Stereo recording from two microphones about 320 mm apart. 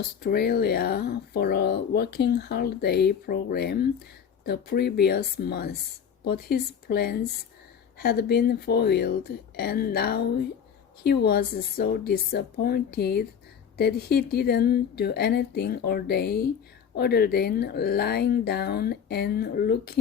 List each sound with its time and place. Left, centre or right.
0.2 s a woman's voice: left